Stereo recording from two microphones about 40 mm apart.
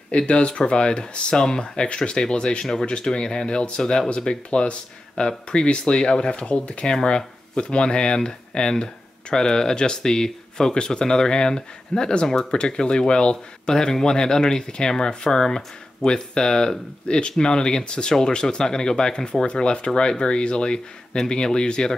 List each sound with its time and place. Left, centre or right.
0.3 s speech: left